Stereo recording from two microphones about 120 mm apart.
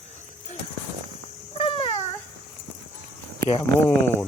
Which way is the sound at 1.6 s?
50° left (ahead or behind).